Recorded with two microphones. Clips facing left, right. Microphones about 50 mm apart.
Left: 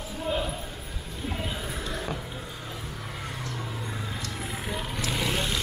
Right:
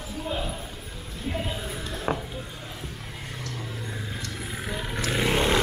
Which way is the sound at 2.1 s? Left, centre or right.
Right.